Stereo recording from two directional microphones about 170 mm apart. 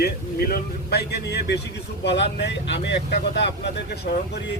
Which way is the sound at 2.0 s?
85° left.